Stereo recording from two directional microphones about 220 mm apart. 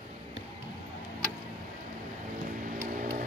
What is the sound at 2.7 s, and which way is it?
Vehicle, 35° right (ahead or behind).